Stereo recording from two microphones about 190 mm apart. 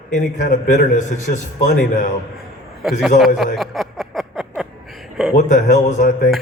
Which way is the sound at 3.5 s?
Centre (ahead or behind).